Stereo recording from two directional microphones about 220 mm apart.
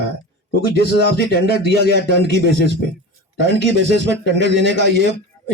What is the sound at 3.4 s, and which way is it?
A man's voice, 55° right (ahead or behind).